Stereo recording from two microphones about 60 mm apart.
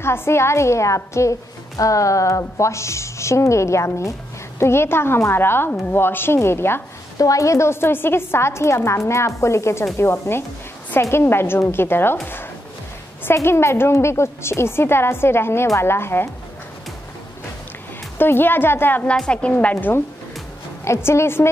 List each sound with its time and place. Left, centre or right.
0.0 s a woman's voice: left
7.2 s a woman's voice: left
13.2 s a woman's voice: left
18.1 s speech: left
19.0 s a woman's voice: centre
20.8 s a woman's voice: left